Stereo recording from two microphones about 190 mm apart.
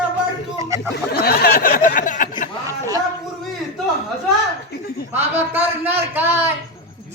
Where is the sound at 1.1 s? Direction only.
55° left (ahead or behind).